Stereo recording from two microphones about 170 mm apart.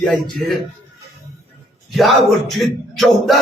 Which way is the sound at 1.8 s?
Centre (ahead or behind).